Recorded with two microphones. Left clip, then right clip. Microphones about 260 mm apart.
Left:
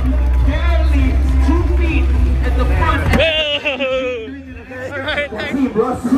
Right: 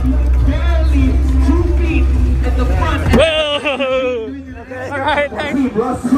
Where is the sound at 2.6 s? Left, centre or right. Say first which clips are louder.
Left 2 dB; left.